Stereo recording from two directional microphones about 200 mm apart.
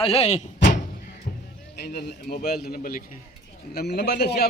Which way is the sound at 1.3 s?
40° left (ahead or behind).